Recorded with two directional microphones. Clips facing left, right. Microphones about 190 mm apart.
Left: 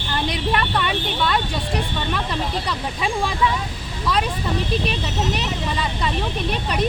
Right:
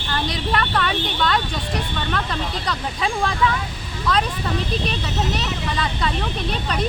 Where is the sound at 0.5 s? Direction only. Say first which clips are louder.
Right 2 dB; 10° left (ahead or behind).